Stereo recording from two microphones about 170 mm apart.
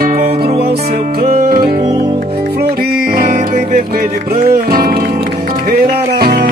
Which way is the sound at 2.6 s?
60° right (ahead or behind).